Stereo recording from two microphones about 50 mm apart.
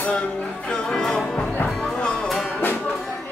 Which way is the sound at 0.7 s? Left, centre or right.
Centre.